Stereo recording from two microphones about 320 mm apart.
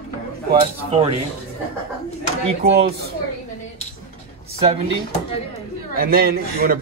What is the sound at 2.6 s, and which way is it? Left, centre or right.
Speech, right.